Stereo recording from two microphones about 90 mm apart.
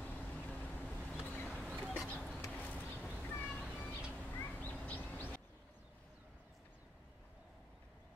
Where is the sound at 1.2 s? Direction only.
20° left (ahead or behind).